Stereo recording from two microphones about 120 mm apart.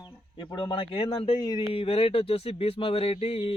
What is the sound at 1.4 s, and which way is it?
Speech, 35° left (ahead or behind).